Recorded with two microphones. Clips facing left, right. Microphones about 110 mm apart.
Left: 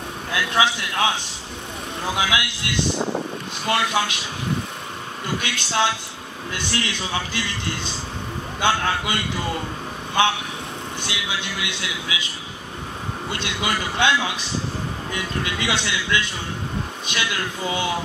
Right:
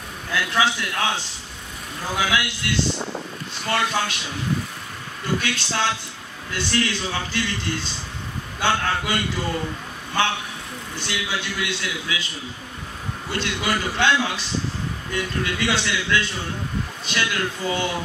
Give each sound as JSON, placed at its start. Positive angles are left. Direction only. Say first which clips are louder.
{"t": 0.3, "sound": "a man's voice", "louder": "left 1 dB", "side_deg": 20}
{"t": 2.1, "sound": "a man's voice", "louder": "right 2 dB", "side_deg": 20}
{"t": 5.2, "sound": "a man's voice", "louder": "right 3 dB", "side_deg": 20}
{"t": 11.0, "sound": "a man's voice", "louder": "right 3 dB", "side_deg": 20}
{"t": 13.3, "sound": "a man's voice", "louder": "right 2 dB", "side_deg": 20}